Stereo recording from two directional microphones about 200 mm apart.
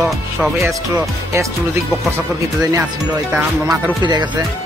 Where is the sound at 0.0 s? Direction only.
Centre (ahead or behind).